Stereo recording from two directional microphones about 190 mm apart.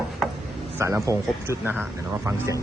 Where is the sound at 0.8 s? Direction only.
15° right (ahead or behind).